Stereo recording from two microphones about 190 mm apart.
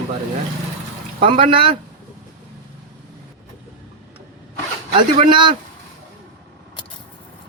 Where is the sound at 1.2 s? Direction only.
30° right (ahead or behind).